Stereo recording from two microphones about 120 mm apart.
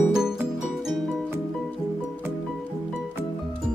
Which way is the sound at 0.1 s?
5° right (ahead or behind).